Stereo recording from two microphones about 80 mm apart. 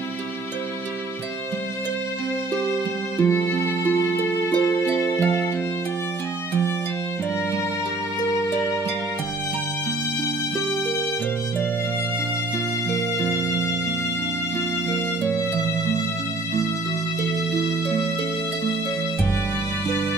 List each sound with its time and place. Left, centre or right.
3.2 s music: left
12.9 s music: left